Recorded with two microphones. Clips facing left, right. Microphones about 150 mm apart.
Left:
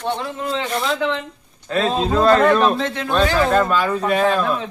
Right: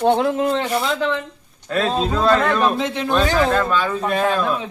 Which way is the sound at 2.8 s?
15° right (ahead or behind).